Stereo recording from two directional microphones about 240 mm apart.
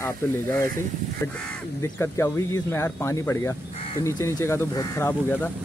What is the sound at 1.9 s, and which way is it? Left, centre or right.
Speech, centre.